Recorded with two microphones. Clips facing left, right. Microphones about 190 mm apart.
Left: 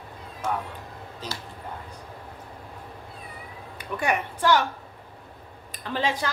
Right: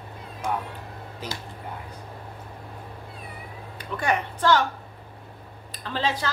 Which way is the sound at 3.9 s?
10° left (ahead or behind).